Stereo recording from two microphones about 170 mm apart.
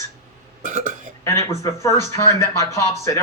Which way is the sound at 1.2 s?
15° left (ahead or behind).